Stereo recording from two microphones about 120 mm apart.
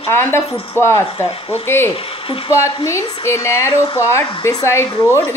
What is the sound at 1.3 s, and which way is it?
Speech, 50° left (ahead or behind).